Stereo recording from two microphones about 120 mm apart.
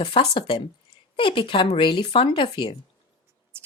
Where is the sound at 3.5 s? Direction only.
20° right (ahead or behind).